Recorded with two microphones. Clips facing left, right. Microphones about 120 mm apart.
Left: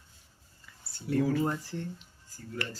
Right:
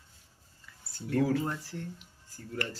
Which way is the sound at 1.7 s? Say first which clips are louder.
Left 3 dB; 5° right (ahead or behind).